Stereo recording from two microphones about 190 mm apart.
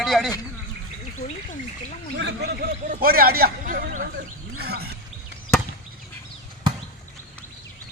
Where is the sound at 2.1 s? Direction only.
60° right (ahead or behind).